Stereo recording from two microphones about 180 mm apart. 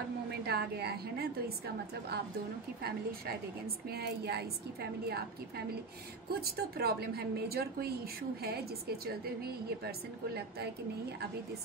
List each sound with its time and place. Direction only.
0.3 s a woman's voice: 65° right (ahead or behind)
2.8 s a woman's voice: 60° right (ahead or behind)
6.4 s a woman's voice: 60° right (ahead or behind)